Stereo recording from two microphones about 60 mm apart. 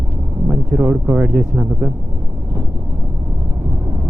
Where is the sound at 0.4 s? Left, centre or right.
Right.